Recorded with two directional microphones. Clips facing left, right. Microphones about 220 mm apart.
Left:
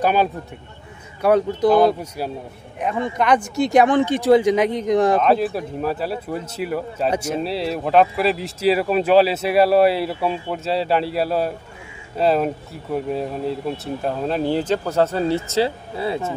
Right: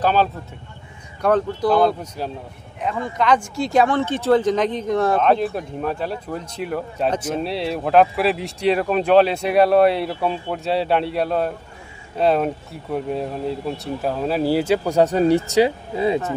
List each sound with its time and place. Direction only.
0.0 s speech: 10° left (ahead or behind)
5.2 s speech: centre (ahead or behind); by 16.2 s 15° right (ahead or behind)